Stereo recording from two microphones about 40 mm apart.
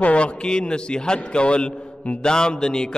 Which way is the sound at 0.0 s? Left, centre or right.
Left.